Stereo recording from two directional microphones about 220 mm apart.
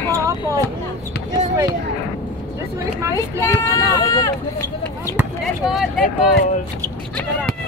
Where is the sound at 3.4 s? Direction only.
15° left (ahead or behind).